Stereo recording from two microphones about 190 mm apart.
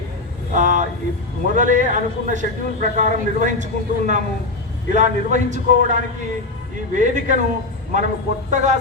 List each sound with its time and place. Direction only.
0.5 s a man's voice: 40° right (ahead or behind)